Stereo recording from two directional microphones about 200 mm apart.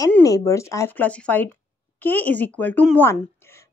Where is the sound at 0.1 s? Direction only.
15° left (ahead or behind).